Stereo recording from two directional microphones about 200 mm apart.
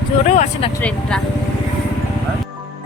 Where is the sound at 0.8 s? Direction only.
5° left (ahead or behind).